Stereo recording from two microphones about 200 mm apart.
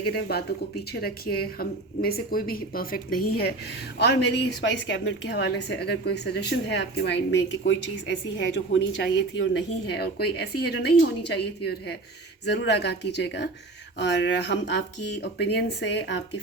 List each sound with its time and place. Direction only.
0.1 s a woman's voice: 55° left (ahead or behind)